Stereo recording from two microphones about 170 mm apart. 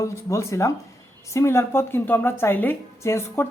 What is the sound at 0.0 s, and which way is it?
A woman's voice, 15° left (ahead or behind).